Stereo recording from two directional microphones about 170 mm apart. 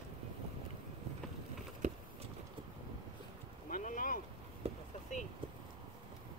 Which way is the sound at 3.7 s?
50° left (ahead or behind).